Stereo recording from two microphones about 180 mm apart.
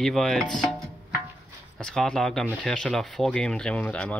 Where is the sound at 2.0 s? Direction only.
Centre (ahead or behind).